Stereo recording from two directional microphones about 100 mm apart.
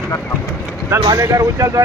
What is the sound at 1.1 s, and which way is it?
Speech, 35° right (ahead or behind).